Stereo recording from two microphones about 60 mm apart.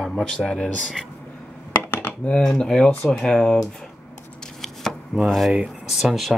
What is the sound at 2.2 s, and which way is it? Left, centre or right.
Speech, centre.